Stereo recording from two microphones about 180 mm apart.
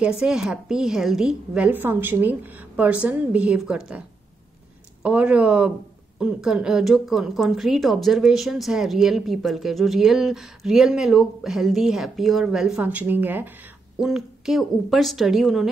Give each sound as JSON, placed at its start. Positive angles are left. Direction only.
{"t": 0.0, "sound": "a woman's voice", "side_deg": -5}
{"t": 5.0, "sound": "a woman's voice", "side_deg": -5}